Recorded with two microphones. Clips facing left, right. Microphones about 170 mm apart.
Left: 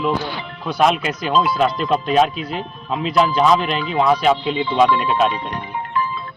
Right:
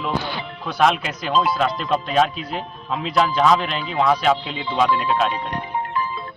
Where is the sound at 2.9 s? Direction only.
10° left (ahead or behind).